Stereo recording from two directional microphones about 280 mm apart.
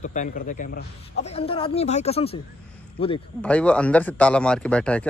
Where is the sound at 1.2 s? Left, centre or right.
Left.